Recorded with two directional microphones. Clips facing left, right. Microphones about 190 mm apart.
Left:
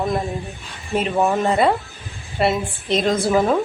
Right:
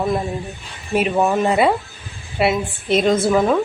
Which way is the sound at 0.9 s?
5° right (ahead or behind).